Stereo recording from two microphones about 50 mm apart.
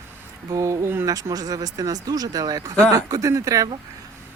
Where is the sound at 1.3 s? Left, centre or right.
Right.